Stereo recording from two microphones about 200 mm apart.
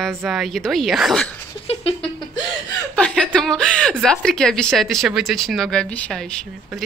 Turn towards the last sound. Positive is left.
turn(degrees=5)  # may be behind; listen again after turning